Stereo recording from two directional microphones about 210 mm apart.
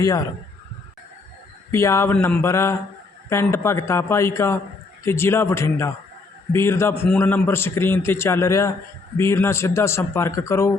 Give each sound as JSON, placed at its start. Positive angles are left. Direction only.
{"t": 0.0, "sound": "a man's voice", "side_deg": 15}
{"t": 1.7, "sound": "a man's voice", "side_deg": 15}